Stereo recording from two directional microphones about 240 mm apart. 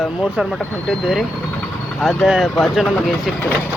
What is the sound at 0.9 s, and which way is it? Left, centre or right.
Speech, centre.